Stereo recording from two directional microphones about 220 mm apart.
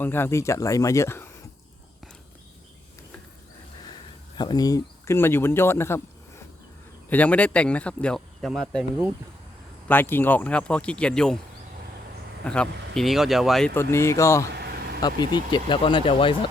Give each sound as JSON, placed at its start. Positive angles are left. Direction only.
{"t": 0.0, "sound": "speech", "side_deg": 10}
{"t": 4.4, "sound": "speech", "side_deg": 20}
{"t": 9.9, "sound": "speech", "side_deg": 10}
{"t": 12.5, "sound": "speech", "side_deg": 5}
{"t": 13.7, "sound": "speech", "side_deg": 10}
{"t": 14.5, "sound": "vehicle", "side_deg": -45}
{"t": 15.0, "sound": "speech", "side_deg": 20}